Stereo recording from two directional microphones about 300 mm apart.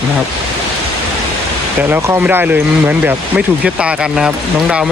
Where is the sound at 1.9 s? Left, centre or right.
Centre.